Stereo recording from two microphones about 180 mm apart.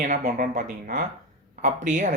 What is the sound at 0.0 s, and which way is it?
Speech, 45° right (ahead or behind).